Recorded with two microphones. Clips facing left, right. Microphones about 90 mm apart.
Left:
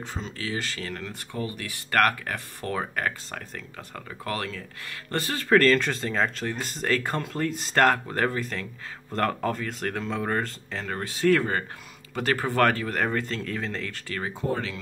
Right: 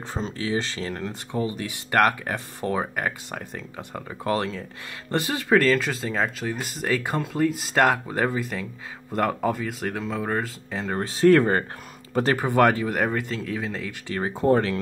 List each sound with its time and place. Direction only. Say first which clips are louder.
0.4 s speech: right 5 dB; 25° right (ahead or behind); by 10.8 s 5° right (ahead or behind)
11.0 s speech: right 5 dB; 35° right (ahead or behind)
12.4 s speech: right 3 dB; 15° right (ahead or behind)
14.0 s speech: right 7 dB; 20° right (ahead or behind)
14.5 s speech: right 11 dB; 45° right (ahead or behind)